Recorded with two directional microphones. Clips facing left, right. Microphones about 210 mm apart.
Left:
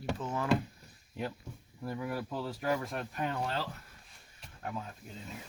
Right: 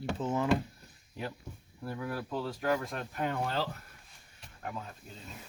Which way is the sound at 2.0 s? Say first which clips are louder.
Right 1 dB; 10° left (ahead or behind).